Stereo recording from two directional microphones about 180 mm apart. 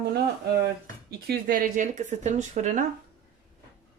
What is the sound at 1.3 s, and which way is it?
Speech, 50° right (ahead or behind).